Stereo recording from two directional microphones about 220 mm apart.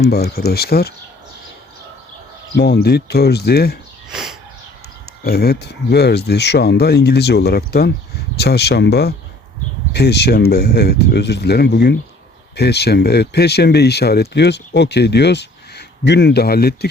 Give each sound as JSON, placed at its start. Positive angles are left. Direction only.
{"t": 0.0, "sound": "speech", "side_deg": 45}
{"t": 2.6, "sound": "speech", "side_deg": 45}
{"t": 4.1, "sound": "a sound", "side_deg": 0}
{"t": 5.2, "sound": "speech", "side_deg": 45}